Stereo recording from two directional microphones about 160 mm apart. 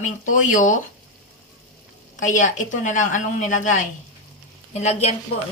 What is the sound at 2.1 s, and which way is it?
A woman's voice, 55° left (ahead or behind).